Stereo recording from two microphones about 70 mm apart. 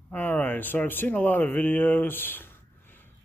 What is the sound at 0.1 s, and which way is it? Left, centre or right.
Speech, left.